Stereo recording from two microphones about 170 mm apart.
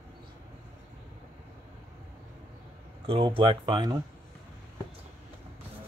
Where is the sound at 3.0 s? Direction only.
30° right (ahead or behind).